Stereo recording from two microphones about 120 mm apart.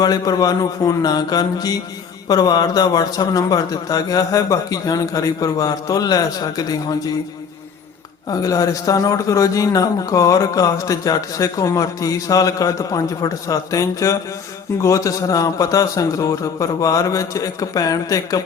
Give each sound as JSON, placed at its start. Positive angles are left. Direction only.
{"t": 0.0, "sound": "a man's voice", "side_deg": 35}
{"t": 8.3, "sound": "a man's voice", "side_deg": 30}